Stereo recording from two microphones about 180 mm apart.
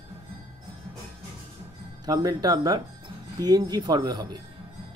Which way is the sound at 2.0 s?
20° right (ahead or behind).